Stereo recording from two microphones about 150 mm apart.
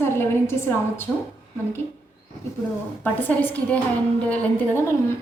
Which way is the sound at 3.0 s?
10° left (ahead or behind).